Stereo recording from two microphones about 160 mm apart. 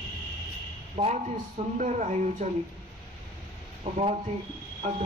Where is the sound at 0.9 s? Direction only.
40° right (ahead or behind).